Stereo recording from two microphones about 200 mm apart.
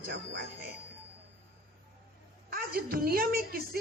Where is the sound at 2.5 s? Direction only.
45° right (ahead or behind).